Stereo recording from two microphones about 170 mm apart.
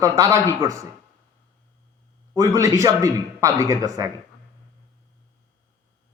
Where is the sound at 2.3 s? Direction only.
20° right (ahead or behind).